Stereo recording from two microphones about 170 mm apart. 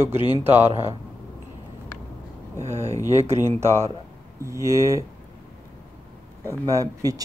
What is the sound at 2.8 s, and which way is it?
Speech, 20° left (ahead or behind).